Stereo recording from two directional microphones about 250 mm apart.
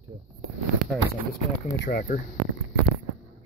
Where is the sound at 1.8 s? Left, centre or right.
Left.